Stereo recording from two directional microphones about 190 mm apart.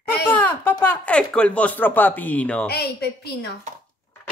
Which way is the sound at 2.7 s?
55° left (ahead or behind).